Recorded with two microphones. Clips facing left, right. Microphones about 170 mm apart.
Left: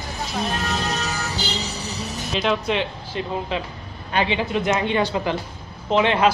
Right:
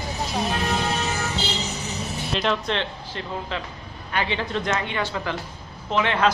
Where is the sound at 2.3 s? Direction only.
5° left (ahead or behind).